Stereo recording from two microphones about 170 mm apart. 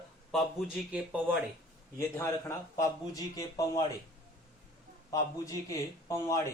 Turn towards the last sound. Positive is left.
turn(degrees=20)  # may be behind; listen again after turning